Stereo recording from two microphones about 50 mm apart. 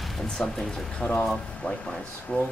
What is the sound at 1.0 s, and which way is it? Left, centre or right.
Speech, left.